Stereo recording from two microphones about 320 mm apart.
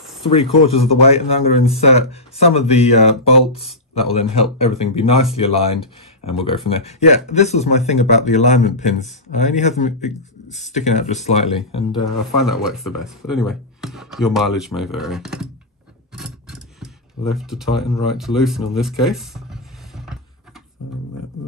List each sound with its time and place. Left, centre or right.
0.3 s a man's voice: centre
12.0 s speech: centre
16.1 s a sound: centre
18.0 s speech: centre